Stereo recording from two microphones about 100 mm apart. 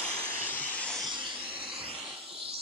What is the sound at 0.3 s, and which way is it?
Vehicle, 20° left (ahead or behind).